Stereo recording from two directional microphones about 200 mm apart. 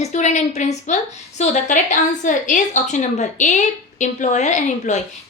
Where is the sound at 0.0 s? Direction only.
35° left (ahead or behind).